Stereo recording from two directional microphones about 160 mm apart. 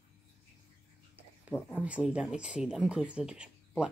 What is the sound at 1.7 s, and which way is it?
Speech, 10° right (ahead or behind).